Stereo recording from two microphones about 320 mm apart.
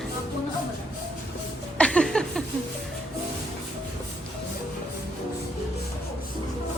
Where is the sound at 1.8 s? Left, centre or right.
Centre.